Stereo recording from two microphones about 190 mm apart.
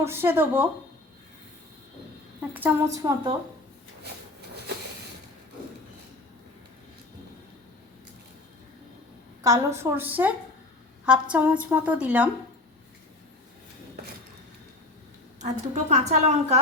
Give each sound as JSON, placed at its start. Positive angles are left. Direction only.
{"t": 0.0, "sound": "a woman's voice", "side_deg": -10}
{"t": 2.5, "sound": "a woman's voice", "side_deg": -10}
{"t": 9.4, "sound": "a woman's voice", "side_deg": -15}
{"t": 15.4, "sound": "a woman's voice", "side_deg": -40}